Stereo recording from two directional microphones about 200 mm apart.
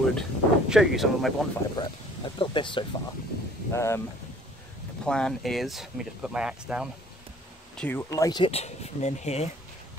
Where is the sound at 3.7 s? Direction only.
15° left (ahead or behind).